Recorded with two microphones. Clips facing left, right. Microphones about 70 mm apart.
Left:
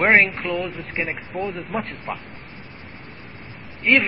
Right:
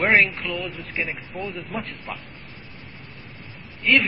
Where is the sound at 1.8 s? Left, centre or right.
Left.